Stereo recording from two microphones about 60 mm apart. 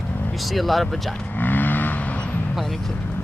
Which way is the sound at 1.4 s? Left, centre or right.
Left.